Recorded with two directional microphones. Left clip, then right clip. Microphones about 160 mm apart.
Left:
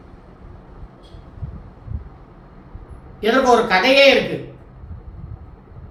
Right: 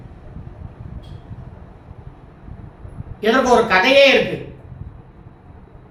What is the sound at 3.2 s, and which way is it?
Speech, 10° right (ahead or behind).